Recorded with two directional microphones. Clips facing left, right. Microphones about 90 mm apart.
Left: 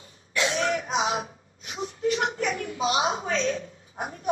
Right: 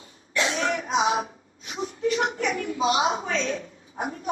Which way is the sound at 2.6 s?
30° right (ahead or behind).